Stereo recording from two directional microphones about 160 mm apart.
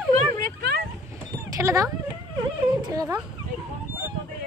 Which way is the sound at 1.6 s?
20° right (ahead or behind).